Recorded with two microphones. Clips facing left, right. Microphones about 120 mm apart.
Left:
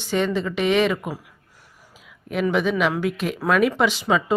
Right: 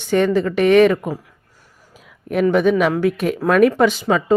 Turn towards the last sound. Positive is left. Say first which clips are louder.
# right 4 dB
turn(degrees=-45)  # may be behind; listen again after turning